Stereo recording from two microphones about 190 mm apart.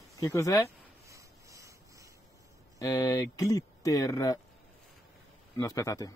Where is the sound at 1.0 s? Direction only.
15° right (ahead or behind).